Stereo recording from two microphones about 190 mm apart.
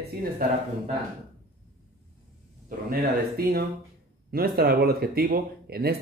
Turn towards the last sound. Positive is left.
turn(degrees=-55)  # may be behind; listen again after turning